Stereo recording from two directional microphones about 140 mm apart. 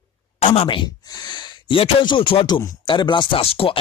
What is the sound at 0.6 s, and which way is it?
Speech, 35° left (ahead or behind).